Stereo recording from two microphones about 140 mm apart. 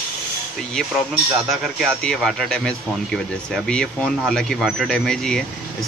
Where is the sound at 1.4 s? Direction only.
Centre (ahead or behind).